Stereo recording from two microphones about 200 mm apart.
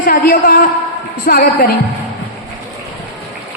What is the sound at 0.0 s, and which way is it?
A man's voice, 45° left (ahead or behind).